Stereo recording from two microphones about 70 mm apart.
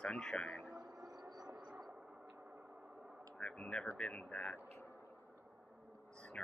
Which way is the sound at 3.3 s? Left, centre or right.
Centre.